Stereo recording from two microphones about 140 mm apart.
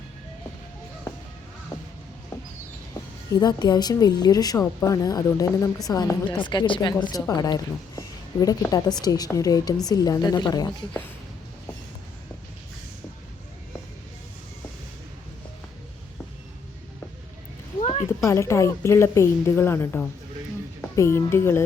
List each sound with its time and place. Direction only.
3.4 s a woman's voice: 30° left (ahead or behind)
17.7 s a sound: 50° left (ahead or behind)
18.3 s a woman's voice: 20° left (ahead or behind)